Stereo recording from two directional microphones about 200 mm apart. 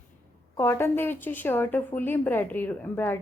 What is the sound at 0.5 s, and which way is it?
A woman's voice, 10° left (ahead or behind).